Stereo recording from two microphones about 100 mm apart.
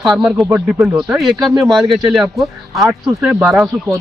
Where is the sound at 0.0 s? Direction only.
10° right (ahead or behind).